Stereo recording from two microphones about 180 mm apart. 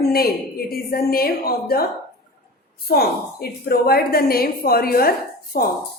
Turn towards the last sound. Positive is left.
turn(degrees=55)  # may be behind; listen again after turning